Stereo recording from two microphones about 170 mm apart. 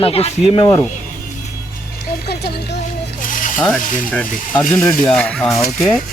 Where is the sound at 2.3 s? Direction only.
70° left (ahead or behind).